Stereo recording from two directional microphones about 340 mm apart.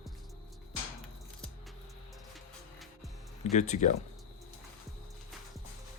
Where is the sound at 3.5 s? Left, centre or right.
Left.